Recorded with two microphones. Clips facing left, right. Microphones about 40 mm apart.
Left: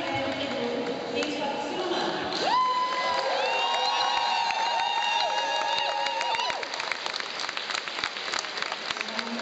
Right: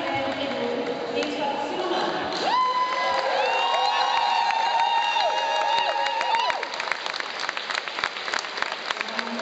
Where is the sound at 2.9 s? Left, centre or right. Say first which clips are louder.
Right 3 dB; right.